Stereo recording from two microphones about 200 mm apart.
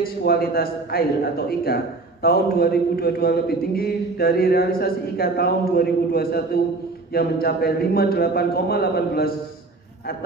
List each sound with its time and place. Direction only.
0.0 s speech: 50° left (ahead or behind)